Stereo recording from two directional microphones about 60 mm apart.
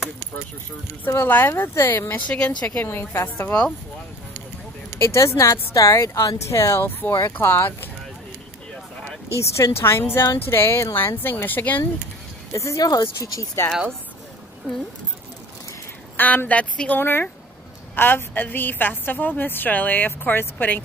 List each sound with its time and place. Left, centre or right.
1.1 s a woman's voice: left
2.2 s speech: centre
2.8 s a woman's voice: left
4.9 s speech: left
6.8 s a woman's voice: left
9.4 s a woman's voice: left
12.5 s speech: left
16.2 s a woman's voice: left
16.9 s a woman's voice: left